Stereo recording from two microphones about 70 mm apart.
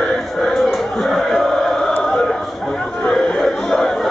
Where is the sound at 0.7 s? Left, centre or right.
Centre.